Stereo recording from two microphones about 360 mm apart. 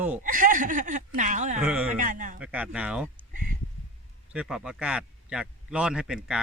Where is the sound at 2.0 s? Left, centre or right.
Right.